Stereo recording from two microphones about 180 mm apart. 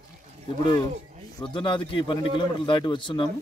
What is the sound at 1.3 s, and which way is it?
A man's voice, 25° left (ahead or behind).